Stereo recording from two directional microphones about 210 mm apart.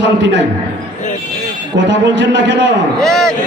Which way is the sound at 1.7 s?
60° right (ahead or behind).